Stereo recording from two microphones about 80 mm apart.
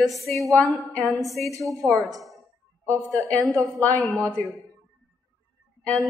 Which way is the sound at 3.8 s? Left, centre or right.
Centre.